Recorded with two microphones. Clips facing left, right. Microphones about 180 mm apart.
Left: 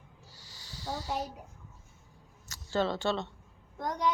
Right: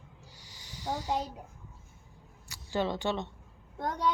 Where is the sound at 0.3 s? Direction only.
15° right (ahead or behind).